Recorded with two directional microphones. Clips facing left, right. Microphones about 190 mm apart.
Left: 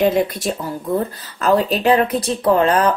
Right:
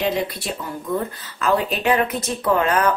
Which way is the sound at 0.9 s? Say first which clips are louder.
Left 3 dB; 35° left (ahead or behind).